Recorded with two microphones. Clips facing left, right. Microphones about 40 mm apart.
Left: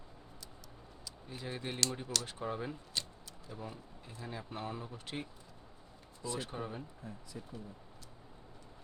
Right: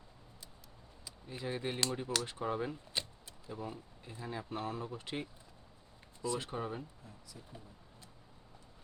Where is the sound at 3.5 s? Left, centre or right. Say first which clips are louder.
Right 3 dB; centre.